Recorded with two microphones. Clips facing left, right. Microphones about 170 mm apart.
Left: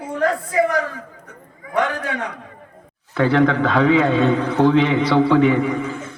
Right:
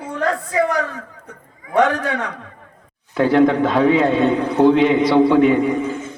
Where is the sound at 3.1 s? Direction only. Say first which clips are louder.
Right 2 dB; 15° right (ahead or behind).